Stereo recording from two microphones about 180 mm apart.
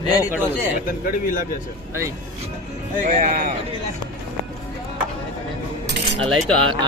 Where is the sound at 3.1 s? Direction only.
45° right (ahead or behind).